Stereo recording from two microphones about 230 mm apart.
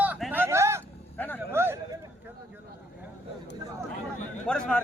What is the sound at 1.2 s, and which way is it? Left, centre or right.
Speech, centre.